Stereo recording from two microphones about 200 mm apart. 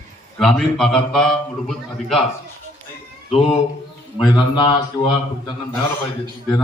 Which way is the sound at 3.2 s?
30° left (ahead or behind).